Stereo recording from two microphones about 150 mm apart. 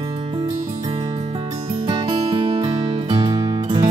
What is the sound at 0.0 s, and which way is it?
Music, 40° right (ahead or behind).